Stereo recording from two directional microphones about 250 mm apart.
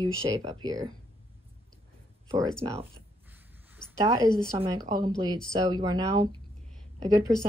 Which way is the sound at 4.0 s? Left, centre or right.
Centre.